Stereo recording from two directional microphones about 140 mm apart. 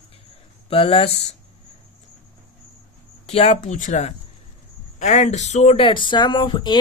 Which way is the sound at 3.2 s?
50° left (ahead or behind).